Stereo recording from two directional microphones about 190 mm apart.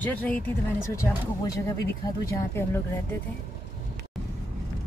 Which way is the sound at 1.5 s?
15° left (ahead or behind).